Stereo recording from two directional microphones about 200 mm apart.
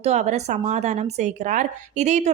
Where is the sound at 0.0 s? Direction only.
35° right (ahead or behind).